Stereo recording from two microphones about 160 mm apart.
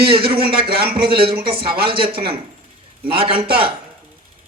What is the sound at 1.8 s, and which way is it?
Speech, 35° right (ahead or behind).